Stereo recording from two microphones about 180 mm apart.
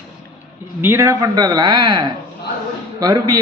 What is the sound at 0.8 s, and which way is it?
A man's voice, 15° right (ahead or behind).